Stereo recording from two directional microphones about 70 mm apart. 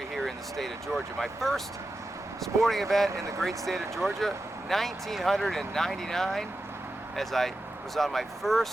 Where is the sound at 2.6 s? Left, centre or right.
Centre.